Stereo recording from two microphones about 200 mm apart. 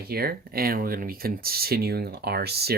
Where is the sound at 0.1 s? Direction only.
50° right (ahead or behind).